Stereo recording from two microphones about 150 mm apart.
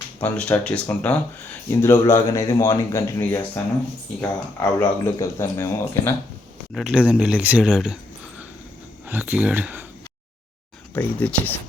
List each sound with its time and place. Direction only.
0.2 s a man's voice: 10° left (ahead or behind)
6.7 s speech: 5° right (ahead or behind)
9.0 s speech: 10° right (ahead or behind)
10.9 s speech: 10° left (ahead or behind)